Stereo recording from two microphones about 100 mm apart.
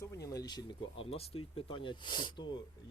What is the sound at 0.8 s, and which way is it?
Speech, 70° left (ahead or behind).